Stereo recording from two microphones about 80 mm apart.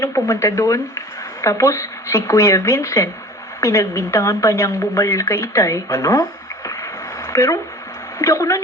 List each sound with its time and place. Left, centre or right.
0.0 s speech: left
6.7 s a sound: left
8.2 s speech: left